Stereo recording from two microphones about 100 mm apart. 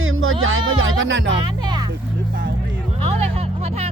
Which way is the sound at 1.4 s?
45° right (ahead or behind).